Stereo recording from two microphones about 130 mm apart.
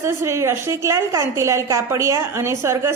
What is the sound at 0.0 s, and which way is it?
A woman's voice, 20° right (ahead or behind).